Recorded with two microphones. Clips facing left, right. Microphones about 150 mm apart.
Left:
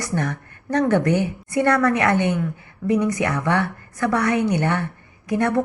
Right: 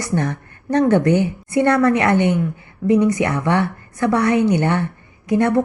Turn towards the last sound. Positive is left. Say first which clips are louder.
# right 4 dB
turn(degrees=-25)  # may be behind; listen again after turning